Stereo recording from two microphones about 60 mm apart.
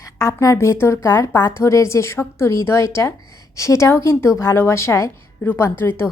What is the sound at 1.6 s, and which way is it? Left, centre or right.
A woman's voice, left.